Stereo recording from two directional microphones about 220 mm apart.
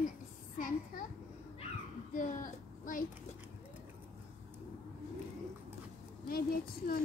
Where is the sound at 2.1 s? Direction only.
35° left (ahead or behind).